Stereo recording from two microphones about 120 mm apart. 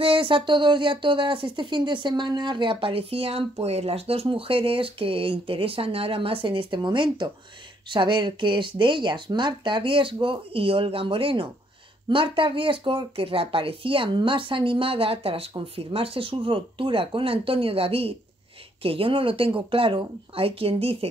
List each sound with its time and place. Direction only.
0.0 s speech: 45° right (ahead or behind)